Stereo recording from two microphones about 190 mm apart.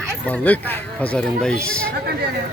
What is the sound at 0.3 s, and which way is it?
Speech, 10° left (ahead or behind).